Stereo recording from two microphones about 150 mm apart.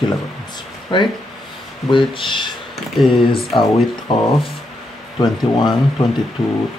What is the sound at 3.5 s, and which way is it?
Speech, 35° left (ahead or behind).